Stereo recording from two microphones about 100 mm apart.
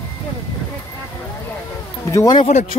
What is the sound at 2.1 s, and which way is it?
Speech, 40° left (ahead or behind).